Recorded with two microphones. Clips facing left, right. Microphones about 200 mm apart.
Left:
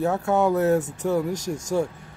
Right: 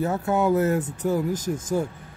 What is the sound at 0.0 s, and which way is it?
Speech, centre (ahead or behind).